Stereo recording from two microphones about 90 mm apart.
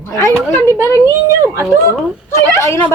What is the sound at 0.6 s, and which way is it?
Female singing, 30° left (ahead or behind).